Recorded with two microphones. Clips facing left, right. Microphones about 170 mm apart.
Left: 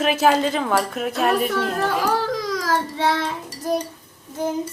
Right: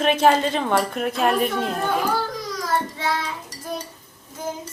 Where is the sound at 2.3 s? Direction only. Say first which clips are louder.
Left 2 dB; 90° left; by 3.3 s 65° left (ahead or behind).